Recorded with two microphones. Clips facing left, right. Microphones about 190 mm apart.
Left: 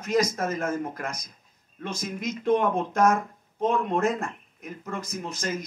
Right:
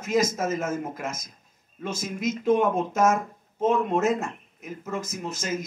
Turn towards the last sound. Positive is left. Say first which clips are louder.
# right 2 dB
turn(degrees=-5)  # may be behind; listen again after turning